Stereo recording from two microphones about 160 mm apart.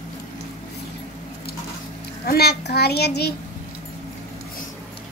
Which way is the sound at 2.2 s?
80° left.